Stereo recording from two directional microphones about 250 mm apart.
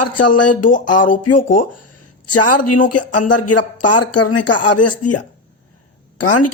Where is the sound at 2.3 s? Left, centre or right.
Left.